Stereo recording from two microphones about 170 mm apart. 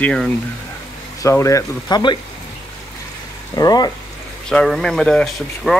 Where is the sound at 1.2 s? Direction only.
20° left (ahead or behind).